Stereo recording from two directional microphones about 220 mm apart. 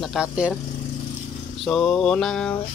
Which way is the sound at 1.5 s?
Centre (ahead or behind).